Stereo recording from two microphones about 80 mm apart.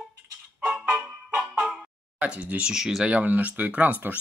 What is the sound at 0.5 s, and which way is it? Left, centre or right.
Music, centre.